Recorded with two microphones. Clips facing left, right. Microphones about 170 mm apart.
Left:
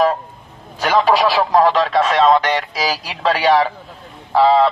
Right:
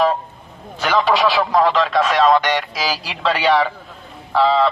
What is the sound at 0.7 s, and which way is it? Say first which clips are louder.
Speech: left 2 dB; 35° left (ahead or behind).